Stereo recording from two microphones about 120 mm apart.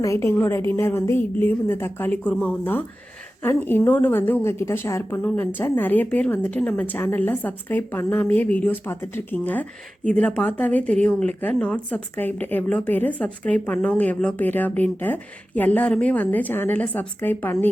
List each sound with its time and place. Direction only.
0.0 s a woman's voice: 25° left (ahead or behind)